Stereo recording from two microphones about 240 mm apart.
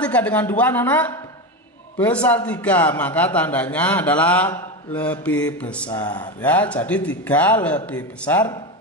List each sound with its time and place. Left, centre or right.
0.0 s a man's voice: centre